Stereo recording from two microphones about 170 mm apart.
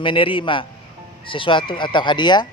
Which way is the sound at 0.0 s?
30° left (ahead or behind).